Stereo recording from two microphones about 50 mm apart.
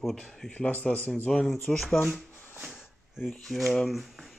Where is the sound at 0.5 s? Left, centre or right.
Left.